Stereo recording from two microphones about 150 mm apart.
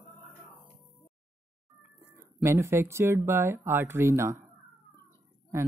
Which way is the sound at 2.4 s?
20° right (ahead or behind).